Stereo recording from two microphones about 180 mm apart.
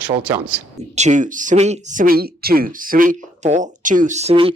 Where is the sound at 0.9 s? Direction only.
40° right (ahead or behind).